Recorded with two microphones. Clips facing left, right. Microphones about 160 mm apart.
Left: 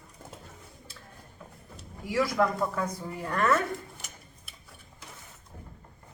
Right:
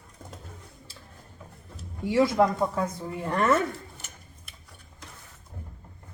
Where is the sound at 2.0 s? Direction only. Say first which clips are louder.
Right 5 dB; 25° right (ahead or behind).